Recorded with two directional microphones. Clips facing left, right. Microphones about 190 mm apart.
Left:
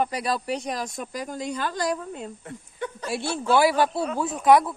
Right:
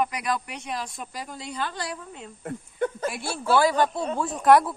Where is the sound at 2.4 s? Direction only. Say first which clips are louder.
Right 6 dB; 50° right (ahead or behind).